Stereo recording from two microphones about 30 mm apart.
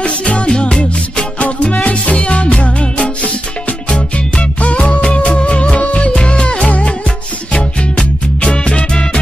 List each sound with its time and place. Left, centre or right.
0.0 s music: left
0.5 s music: left
1.4 s music: left